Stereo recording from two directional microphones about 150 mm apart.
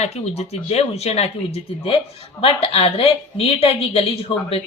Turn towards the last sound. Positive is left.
turn(degrees=40)  # may be behind; listen again after turning